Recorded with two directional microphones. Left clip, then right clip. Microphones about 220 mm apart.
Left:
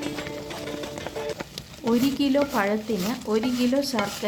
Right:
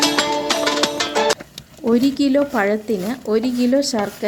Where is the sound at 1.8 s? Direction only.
20° right (ahead or behind).